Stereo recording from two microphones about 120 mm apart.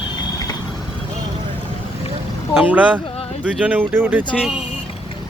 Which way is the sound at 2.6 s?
15° right (ahead or behind).